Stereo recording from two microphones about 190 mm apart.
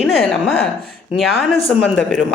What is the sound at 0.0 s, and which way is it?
Speech, 5° left (ahead or behind).